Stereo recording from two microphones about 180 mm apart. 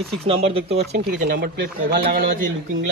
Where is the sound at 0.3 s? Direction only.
30° right (ahead or behind).